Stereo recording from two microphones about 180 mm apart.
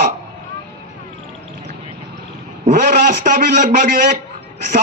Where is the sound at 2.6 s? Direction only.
50° right (ahead or behind).